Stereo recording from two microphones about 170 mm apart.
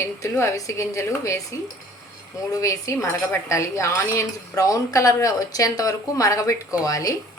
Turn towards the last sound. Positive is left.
turn(degrees=20)  # may be behind; listen again after turning